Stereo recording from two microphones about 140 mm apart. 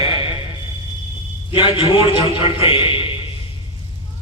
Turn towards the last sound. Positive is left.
turn(degrees=40)  # may be behind; listen again after turning